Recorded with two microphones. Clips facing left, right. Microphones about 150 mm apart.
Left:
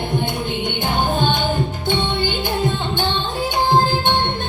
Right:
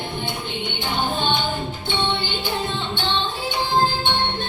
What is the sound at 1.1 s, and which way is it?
Music, 45° left (ahead or behind).